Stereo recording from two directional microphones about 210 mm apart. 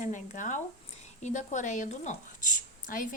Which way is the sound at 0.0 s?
35° left (ahead or behind).